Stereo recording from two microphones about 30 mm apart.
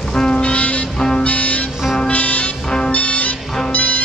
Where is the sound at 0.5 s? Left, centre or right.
Left.